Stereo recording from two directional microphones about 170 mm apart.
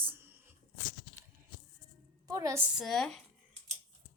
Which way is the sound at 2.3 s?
20° right (ahead or behind).